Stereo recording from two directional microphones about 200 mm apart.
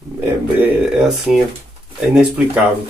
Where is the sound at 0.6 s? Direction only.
Centre (ahead or behind).